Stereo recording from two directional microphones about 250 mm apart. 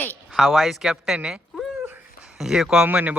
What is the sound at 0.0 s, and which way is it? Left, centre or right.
Cat, centre.